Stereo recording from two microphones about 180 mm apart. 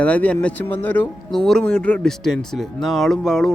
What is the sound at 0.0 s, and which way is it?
Speech, 5° left (ahead or behind).